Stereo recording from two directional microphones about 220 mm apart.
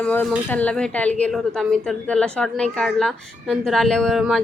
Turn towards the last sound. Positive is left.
turn(degrees=0)  # may be behind; listen again after turning